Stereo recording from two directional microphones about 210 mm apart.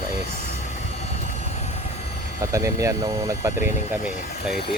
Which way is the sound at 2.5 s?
15° right (ahead or behind).